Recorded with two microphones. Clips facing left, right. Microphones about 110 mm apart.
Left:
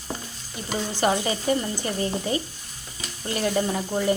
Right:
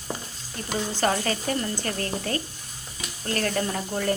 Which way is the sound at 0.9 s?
15° left (ahead or behind).